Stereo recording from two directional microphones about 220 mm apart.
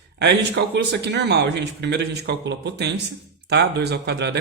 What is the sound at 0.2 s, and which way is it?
Speech, 50° right (ahead or behind).